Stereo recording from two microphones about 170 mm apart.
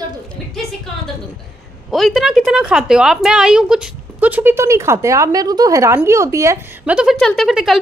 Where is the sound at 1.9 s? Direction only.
Centre (ahead or behind).